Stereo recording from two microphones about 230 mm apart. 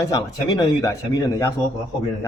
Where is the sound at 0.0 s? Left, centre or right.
Centre.